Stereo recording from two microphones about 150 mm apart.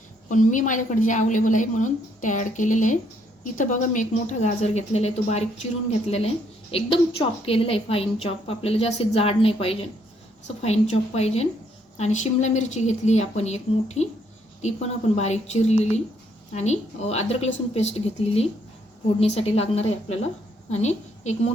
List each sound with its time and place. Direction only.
0.3 s a woman's voice: 60° left (ahead or behind)
6.7 s a woman's voice: 40° left (ahead or behind)